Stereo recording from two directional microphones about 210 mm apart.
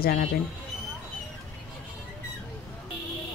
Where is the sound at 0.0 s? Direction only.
45° left (ahead or behind).